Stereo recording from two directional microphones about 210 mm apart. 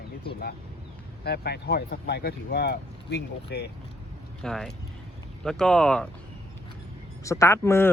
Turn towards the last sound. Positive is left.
turn(degrees=10)  # may be behind; listen again after turning